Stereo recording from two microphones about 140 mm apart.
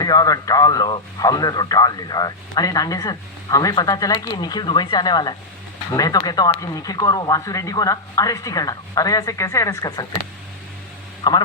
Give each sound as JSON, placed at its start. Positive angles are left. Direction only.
{"t": 0.0, "sound": "speech", "side_deg": 25}
{"t": 11.2, "sound": "speech", "side_deg": 30}